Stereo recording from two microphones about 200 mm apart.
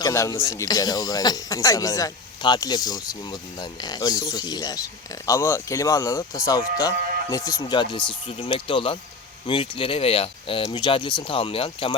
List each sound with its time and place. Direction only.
0.0 s speech: 15° left (ahead or behind)